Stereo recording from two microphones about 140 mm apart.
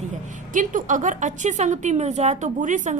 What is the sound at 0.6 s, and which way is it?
A woman's voice, 65° right (ahead or behind).